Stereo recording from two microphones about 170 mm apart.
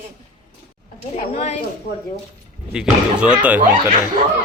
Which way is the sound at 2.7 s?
5° right (ahead or behind).